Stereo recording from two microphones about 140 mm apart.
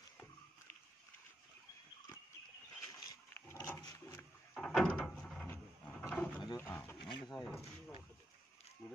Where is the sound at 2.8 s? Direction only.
25° left (ahead or behind).